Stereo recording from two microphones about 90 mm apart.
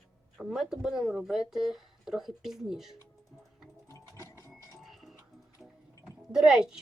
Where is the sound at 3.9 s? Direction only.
30° left (ahead or behind).